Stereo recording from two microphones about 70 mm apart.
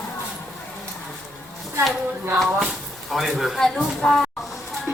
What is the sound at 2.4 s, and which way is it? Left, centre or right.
Speech, centre.